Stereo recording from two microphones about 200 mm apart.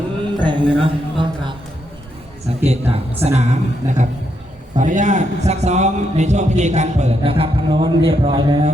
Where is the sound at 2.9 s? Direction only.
30° right (ahead or behind).